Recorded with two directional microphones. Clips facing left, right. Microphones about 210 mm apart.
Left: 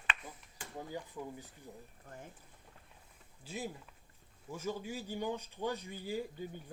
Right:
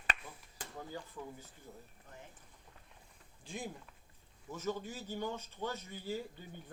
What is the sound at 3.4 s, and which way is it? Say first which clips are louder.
Speech: left 2 dB; 5° left (ahead or behind).